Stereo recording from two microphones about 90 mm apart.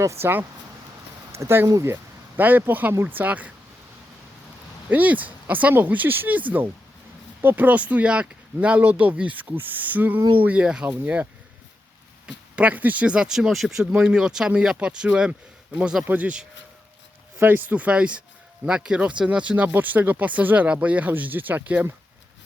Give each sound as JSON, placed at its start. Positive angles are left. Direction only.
{"t": 0.0, "sound": "speech", "side_deg": -30}
{"t": 4.9, "sound": "speech", "side_deg": -20}
{"t": 7.4, "sound": "speech", "side_deg": -20}